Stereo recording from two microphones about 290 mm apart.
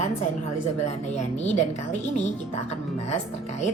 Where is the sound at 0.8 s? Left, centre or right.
Left.